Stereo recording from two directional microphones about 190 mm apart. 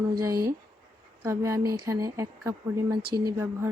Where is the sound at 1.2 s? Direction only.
15° right (ahead or behind).